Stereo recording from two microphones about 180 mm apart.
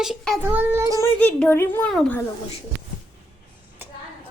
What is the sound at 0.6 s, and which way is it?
Child singing, 15° right (ahead or behind).